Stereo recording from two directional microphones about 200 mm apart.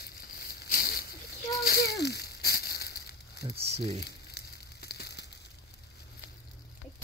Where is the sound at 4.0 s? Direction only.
55° left (ahead or behind).